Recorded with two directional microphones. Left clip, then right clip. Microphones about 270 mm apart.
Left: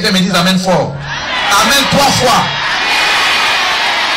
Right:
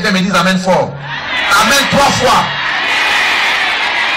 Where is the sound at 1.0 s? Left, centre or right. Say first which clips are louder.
Left 1 dB; left.